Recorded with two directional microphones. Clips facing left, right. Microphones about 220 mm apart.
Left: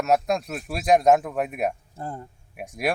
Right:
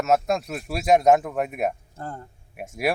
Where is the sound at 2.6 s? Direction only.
Centre (ahead or behind).